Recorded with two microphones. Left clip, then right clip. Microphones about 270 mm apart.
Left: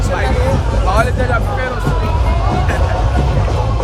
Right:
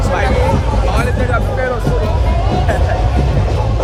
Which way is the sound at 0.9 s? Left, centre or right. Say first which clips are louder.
Left 4 dB; centre.